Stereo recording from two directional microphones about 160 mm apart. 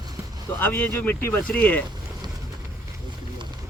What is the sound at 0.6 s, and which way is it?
Speech, 10° left (ahead or behind).